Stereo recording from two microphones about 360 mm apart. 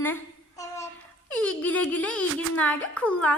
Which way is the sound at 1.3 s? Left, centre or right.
Centre.